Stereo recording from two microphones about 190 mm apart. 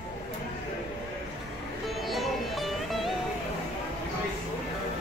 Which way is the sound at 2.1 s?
Centre (ahead or behind).